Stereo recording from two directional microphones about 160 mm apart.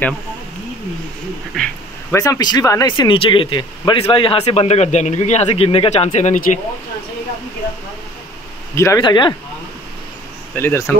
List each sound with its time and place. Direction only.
1.5 s a sound: 5° left (ahead or behind)
2.1 s speech: 20° left (ahead or behind); by 6.6 s 50° left (ahead or behind)
8.7 s speech: 20° left (ahead or behind)
10.5 s speech: 15° left (ahead or behind)